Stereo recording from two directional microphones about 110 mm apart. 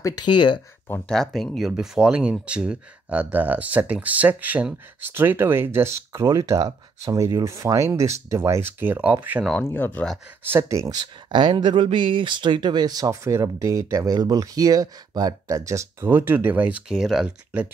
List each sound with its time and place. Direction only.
0.0 s speech: 45° left (ahead or behind)
1.0 s speech: 5° left (ahead or behind); by 9.4 s 15° right (ahead or behind)
9.7 s speech: 20° left (ahead or behind)
10.4 s speech: 25° right (ahead or behind)
11.3 s speech: 45° right (ahead or behind); by 17.6 s 5° right (ahead or behind)